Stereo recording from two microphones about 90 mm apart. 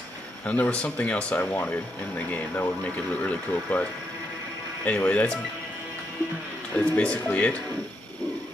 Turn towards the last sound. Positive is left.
turn(degrees=15)  # may be behind; listen again after turning